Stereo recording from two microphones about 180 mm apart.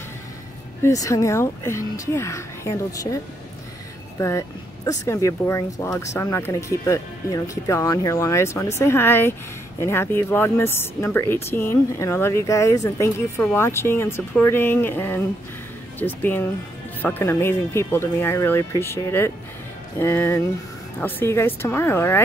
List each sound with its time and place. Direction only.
0.8 s speech: 20° left (ahead or behind)
4.2 s speech: 15° left (ahead or behind)